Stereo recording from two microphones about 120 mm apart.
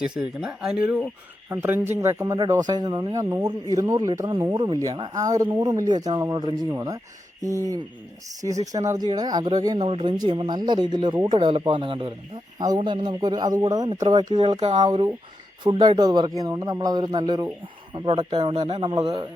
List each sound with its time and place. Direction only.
0.0 s speech: 5° right (ahead or behind); by 7.0 s 30° right (ahead or behind)
8.4 s speech: 30° right (ahead or behind)
9.7 s speech: 55° right (ahead or behind); by 17.5 s 35° right (ahead or behind)
17.9 s speech: 45° right (ahead or behind)
18.9 s speech: 35° right (ahead or behind)